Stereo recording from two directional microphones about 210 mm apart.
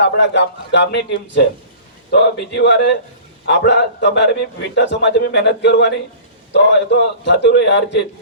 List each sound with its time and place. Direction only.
0.0 s a man's voice: 55° left (ahead or behind)